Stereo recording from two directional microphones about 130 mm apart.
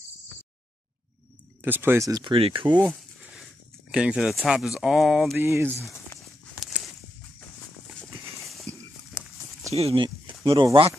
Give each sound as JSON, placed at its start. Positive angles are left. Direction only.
{"t": 1.6, "sound": "speech", "side_deg": -15}
{"t": 2.2, "sound": "speech", "side_deg": -45}
{"t": 2.9, "sound": "a sound", "side_deg": 0}
{"t": 3.9, "sound": "speech", "side_deg": -5}
{"t": 5.4, "sound": "speech", "side_deg": -15}
{"t": 5.8, "sound": "speech", "side_deg": 20}
{"t": 8.7, "sound": "horse", "side_deg": -65}
{"t": 9.8, "sound": "speech", "side_deg": -50}
{"t": 10.0, "sound": "speech", "side_deg": -40}